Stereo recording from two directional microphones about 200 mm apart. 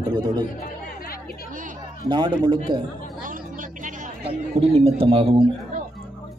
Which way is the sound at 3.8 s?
30° right (ahead or behind).